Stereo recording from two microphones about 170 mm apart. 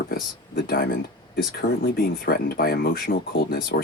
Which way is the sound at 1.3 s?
60° left (ahead or behind).